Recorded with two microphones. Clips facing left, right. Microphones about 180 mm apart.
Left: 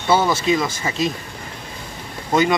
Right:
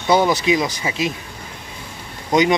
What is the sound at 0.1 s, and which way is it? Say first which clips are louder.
Speech: right 1 dB; 15° right (ahead or behind).